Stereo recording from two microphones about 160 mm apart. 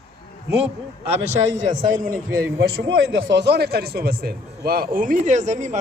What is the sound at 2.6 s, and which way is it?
Speech, 75° right (ahead or behind).